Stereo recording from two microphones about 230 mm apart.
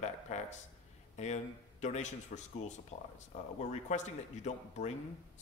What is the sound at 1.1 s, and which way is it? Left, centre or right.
Speech, left.